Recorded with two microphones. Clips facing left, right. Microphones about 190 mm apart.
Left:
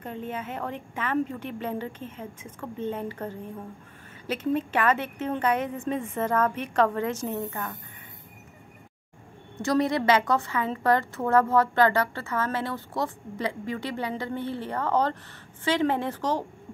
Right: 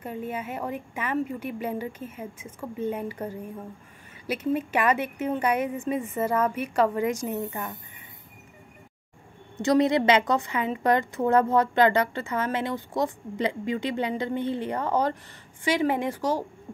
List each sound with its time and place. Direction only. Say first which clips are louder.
0.0 s a woman's voice: right 1 dB; 10° right (ahead or behind)
9.6 s a woman's voice: right 3 dB; 20° right (ahead or behind)